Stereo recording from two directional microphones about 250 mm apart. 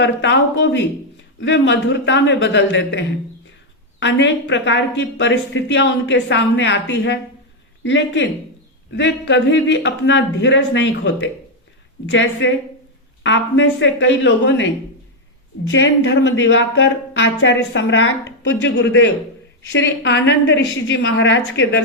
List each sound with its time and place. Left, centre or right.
0.0 s a woman's voice: left
4.0 s a woman's voice: left